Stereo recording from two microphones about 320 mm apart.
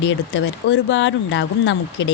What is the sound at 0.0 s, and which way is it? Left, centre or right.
A woman's voice, left.